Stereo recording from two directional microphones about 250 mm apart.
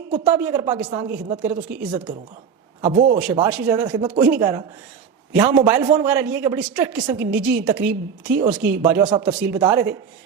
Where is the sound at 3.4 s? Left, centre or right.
Centre.